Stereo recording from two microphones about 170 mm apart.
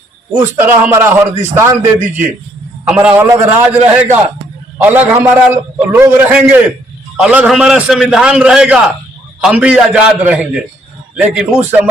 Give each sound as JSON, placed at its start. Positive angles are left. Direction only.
{"t": 0.3, "sound": "a man's voice", "side_deg": -10}
{"t": 4.8, "sound": "a man's voice", "side_deg": -10}